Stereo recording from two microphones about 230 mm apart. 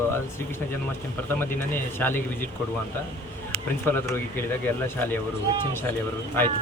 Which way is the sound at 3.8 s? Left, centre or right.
Centre.